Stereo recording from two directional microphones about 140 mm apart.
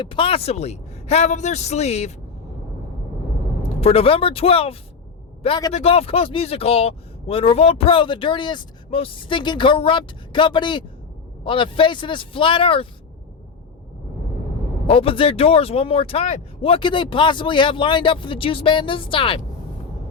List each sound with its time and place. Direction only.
0.0 s a man's voice: 40° left (ahead or behind)
3.6 s a man's voice: 45° left (ahead or behind)
14.8 s speech: 40° left (ahead or behind)